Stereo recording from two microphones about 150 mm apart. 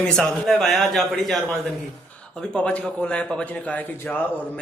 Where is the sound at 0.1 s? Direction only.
Centre (ahead or behind).